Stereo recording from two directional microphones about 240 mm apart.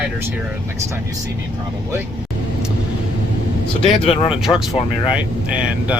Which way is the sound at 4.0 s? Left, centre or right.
Left.